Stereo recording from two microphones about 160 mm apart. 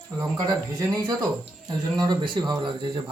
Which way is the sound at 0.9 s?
25° right (ahead or behind).